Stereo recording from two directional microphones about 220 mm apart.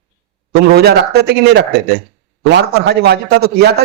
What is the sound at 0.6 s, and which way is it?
A man's voice, 45° right (ahead or behind).